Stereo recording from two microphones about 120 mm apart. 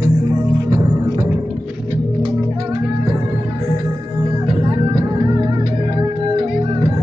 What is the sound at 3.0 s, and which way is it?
Music, 30° right (ahead or behind).